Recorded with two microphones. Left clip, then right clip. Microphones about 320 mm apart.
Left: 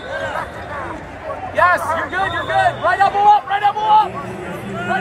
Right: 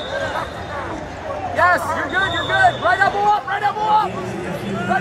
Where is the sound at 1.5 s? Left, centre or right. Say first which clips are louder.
Left 2 dB; centre.